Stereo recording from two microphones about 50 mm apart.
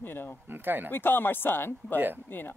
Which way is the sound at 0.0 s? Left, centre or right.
Left.